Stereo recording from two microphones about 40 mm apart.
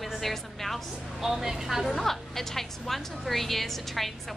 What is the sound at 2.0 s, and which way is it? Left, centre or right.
A woman's voice, centre.